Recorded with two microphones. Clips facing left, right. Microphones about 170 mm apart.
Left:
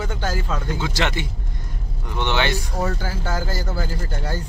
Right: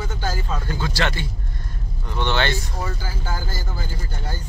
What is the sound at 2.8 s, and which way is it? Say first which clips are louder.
Speech: left 4 dB; 65° left (ahead or behind).